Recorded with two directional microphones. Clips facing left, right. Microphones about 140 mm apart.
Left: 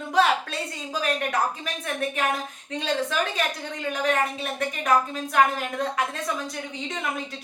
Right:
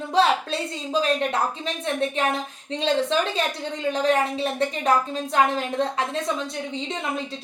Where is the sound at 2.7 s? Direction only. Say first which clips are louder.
Right 4 dB; 25° right (ahead or behind).